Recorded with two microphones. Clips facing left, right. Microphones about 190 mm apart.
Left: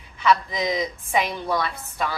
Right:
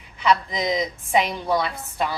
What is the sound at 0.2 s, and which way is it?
A man's voice, 20° right (ahead or behind).